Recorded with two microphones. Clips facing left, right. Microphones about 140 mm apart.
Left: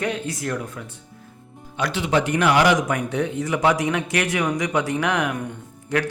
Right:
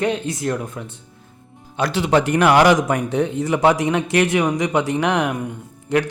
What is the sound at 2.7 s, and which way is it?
Speech, 30° right (ahead or behind).